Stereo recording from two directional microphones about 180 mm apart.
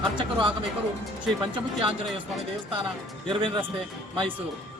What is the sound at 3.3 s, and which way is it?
Speech, 30° right (ahead or behind).